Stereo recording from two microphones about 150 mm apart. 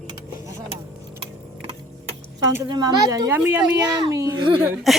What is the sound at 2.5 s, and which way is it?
A child's voice, 25° right (ahead or behind).